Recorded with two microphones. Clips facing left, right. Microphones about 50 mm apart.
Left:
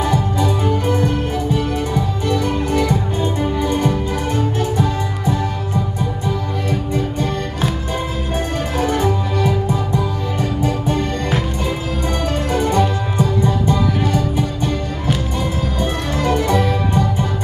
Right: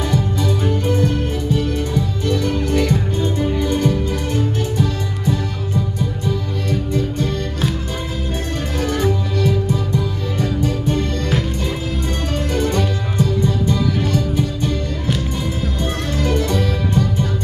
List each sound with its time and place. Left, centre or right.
0.0 s music: centre
8.7 s music: centre
16.2 s music: centre